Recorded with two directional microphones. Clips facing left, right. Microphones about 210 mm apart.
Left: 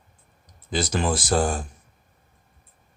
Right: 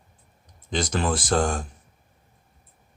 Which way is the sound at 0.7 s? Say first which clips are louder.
Left 1 dB; 5° left (ahead or behind).